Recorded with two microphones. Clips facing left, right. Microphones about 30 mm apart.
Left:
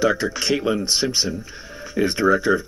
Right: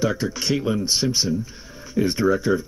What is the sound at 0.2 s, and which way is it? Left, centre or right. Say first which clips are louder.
Speech: left 2 dB; left.